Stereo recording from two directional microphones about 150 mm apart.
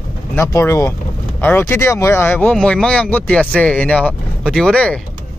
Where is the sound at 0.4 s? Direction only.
20° left (ahead or behind).